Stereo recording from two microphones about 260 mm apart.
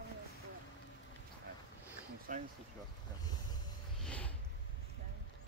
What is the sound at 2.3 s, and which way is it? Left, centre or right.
Speech, right.